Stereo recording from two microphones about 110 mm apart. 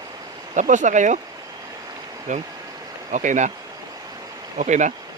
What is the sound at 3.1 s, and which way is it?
Speech, 90° right.